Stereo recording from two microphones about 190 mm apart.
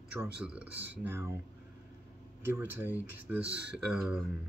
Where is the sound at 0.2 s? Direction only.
10° right (ahead or behind).